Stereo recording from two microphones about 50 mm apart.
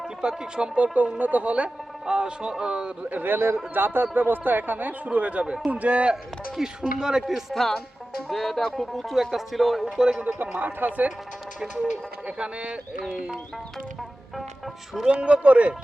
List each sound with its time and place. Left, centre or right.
0.0 s speech: centre
3.2 s speech: right
6.6 s speech: centre
7.5 s speech: centre
9.8 s speech: centre
10.6 s speech: right
11.7 s speech: right
15.0 s speech: right